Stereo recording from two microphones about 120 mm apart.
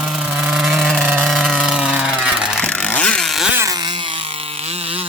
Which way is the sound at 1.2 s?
Centre (ahead or behind).